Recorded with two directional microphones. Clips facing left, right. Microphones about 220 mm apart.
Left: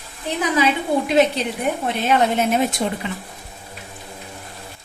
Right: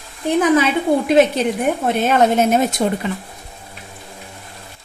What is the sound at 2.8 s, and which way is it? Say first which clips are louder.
Speech: right 5 dB; 45° right (ahead or behind).